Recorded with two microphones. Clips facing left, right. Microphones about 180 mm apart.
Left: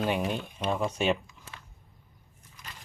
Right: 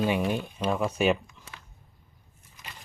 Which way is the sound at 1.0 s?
5° right (ahead or behind).